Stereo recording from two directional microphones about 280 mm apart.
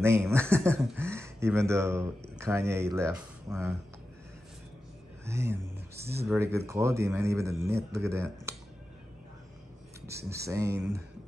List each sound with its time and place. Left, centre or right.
0.0 s speech: centre
5.2 s speech: centre
5.9 s speech: right
6.2 s speech: centre
10.0 s speech: centre